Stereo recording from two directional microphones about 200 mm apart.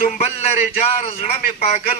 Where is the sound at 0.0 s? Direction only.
30° left (ahead or behind).